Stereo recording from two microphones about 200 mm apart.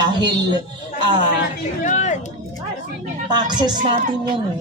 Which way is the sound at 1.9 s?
35° left (ahead or behind).